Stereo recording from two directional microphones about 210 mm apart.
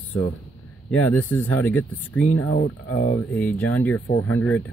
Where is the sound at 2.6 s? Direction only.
40° left (ahead or behind).